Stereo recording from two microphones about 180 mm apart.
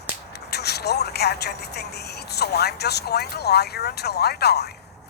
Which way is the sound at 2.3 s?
65° left (ahead or behind).